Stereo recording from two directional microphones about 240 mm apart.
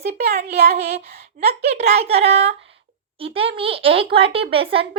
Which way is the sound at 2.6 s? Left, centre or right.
Right.